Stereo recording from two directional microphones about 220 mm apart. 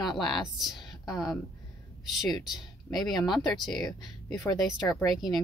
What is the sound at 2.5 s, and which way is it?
Speech, centre (ahead or behind).